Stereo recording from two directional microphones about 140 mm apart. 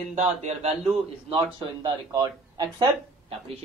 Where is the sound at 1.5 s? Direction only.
30° right (ahead or behind).